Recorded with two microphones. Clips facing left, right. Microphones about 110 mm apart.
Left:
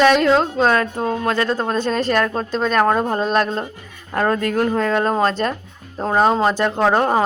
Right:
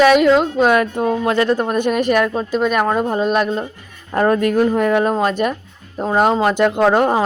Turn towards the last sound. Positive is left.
turn(degrees=-5)  # may be behind; listen again after turning